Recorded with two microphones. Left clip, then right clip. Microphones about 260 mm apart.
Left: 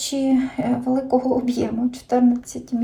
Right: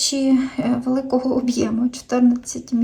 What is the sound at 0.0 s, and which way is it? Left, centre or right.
Speech, centre.